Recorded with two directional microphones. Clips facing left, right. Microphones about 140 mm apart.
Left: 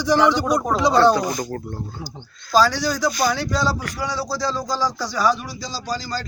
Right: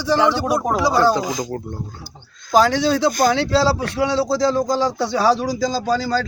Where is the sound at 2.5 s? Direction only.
20° right (ahead or behind).